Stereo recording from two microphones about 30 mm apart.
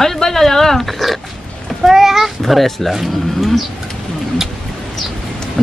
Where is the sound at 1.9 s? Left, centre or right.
Centre.